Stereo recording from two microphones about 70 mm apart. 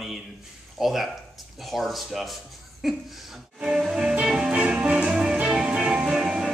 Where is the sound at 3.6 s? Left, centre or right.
Centre.